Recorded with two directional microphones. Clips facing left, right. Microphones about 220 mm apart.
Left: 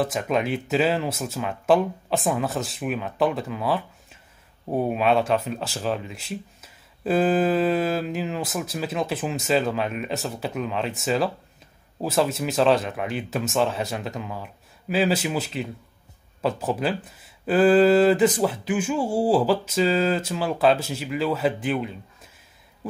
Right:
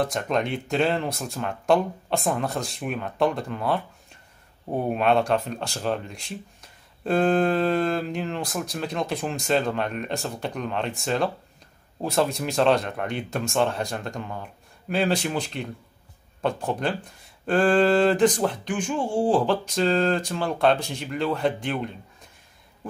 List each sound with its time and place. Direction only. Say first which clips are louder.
0.0 s speech: left 1 dB; 5° left (ahead or behind)